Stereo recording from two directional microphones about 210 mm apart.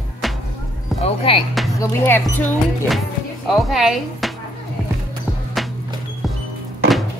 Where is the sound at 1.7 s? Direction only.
15° left (ahead or behind).